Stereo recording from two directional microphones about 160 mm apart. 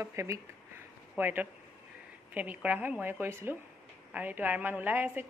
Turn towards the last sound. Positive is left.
turn(degrees=-10)  # may be behind; listen again after turning